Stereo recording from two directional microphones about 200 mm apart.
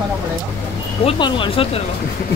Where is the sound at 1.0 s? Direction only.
25° left (ahead or behind).